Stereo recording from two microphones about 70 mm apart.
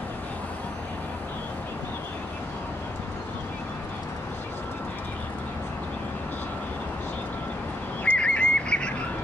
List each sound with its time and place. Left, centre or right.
8.0 s bird: left